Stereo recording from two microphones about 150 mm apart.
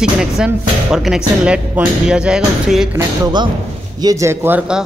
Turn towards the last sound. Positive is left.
turn(degrees=-10)  # may be behind; listen again after turning